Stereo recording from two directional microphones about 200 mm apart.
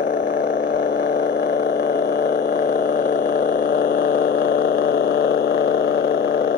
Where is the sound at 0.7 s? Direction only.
60° left (ahead or behind).